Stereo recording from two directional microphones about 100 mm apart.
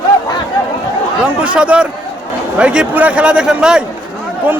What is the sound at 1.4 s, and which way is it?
A man's voice, 10° right (ahead or behind).